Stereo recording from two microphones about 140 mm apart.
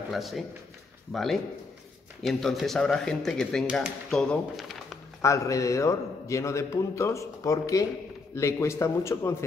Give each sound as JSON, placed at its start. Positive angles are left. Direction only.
{"t": 0.1, "sound": "speech", "side_deg": 0}
{"t": 5.2, "sound": "a man's voice", "side_deg": 20}